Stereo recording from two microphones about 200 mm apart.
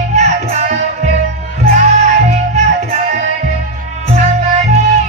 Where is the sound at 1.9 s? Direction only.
35° right (ahead or behind).